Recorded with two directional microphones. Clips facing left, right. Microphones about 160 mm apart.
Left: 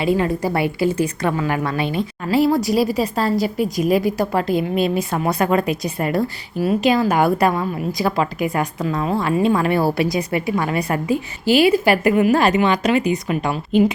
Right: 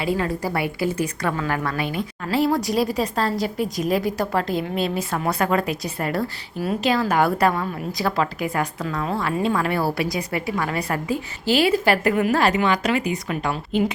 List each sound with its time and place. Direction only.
0.0 s a woman's voice: 20° left (ahead or behind)
2.3 s a woman's voice: 5° left (ahead or behind)